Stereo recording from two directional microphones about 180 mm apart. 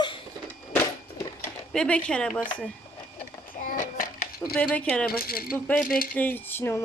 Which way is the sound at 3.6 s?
50° left (ahead or behind).